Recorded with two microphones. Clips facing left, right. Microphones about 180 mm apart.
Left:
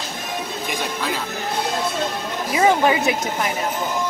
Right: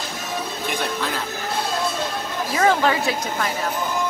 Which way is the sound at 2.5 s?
15° left (ahead or behind).